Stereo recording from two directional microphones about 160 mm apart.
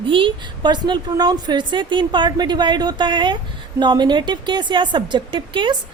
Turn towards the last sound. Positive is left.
turn(degrees=-30)  # may be behind; listen again after turning